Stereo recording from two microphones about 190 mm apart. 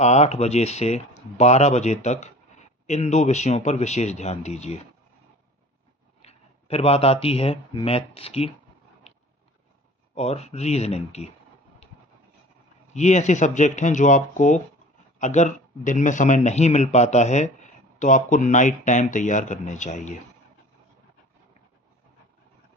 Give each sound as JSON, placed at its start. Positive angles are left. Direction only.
{"t": 0.0, "sound": "speech", "side_deg": 35}
{"t": 6.2, "sound": "speech", "side_deg": 30}
{"t": 10.2, "sound": "speech", "side_deg": 35}
{"t": 12.9, "sound": "speech", "side_deg": 35}